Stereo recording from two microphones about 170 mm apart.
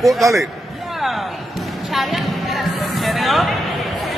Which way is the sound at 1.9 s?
Centre (ahead or behind).